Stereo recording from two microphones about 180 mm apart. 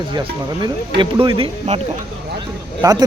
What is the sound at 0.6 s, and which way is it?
Speech, 25° right (ahead or behind).